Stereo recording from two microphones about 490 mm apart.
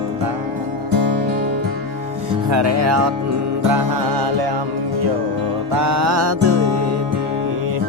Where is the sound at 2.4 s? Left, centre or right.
Right.